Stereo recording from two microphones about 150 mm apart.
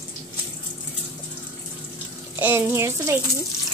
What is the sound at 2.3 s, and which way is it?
Speech, 15° right (ahead or behind).